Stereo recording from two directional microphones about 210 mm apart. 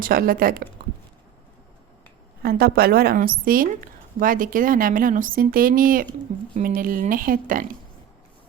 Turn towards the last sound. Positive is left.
turn(degrees=-40)  # may be behind; listen again after turning